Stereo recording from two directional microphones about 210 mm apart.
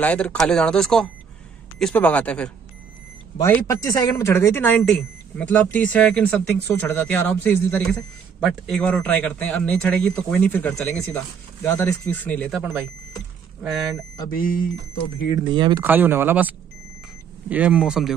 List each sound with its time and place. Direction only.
0.0 s speech: 5° left (ahead or behind)
14.3 s speech: 40° left (ahead or behind)
15.5 s speech: 20° right (ahead or behind)
15.8 s speech: 10° right (ahead or behind)